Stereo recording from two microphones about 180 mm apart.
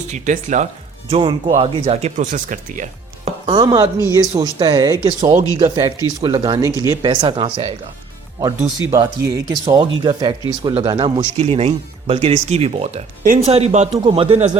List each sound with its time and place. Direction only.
0.1 s speech: 45° right (ahead or behind)
1.1 s speech: 30° right (ahead or behind)
3.2 s chopping: 30° right (ahead or behind)
4.1 s speech: 20° right (ahead or behind)
8.9 s speech: 20° right (ahead or behind)
10.9 s speech: 35° right (ahead or behind)
13.2 s speech: 50° right (ahead or behind)
13.5 s speech: 35° right (ahead or behind)
13.9 s speech: 25° right (ahead or behind)